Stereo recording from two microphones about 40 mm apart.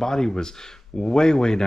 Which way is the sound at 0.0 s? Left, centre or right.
Centre.